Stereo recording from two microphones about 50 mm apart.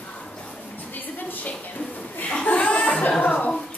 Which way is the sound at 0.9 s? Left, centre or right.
Left.